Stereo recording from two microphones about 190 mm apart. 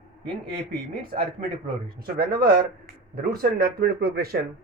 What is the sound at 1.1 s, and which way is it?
Speech, 40° right (ahead or behind).